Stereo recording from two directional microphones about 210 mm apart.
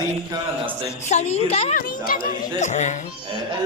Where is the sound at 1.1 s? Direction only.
30° left (ahead or behind).